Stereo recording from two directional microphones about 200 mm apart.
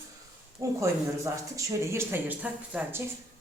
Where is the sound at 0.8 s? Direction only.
15° right (ahead or behind).